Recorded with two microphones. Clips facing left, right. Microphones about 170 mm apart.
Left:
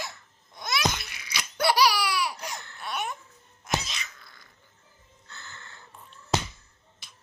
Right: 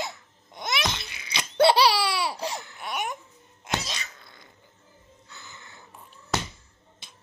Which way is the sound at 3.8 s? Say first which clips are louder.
Right 3 dB; 35° right (ahead or behind).